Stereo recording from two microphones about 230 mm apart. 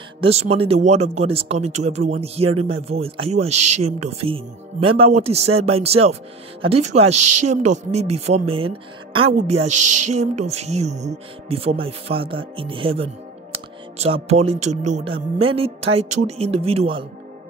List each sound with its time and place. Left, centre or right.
0.2 s speech: right
3.4 s speech: right
3.8 s speech: right
7.1 s speech: right
7.7 s speech: right
9.7 s speech: right
10.1 s speech: right